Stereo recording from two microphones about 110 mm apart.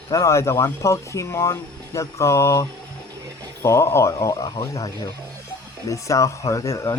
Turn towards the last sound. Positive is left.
turn(degrees=25)  # may be behind; listen again after turning